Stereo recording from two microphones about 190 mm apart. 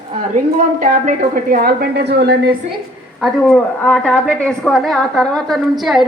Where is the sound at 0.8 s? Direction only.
45° right (ahead or behind).